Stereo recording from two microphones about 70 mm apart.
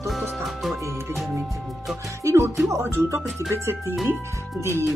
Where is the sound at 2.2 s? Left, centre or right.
Right.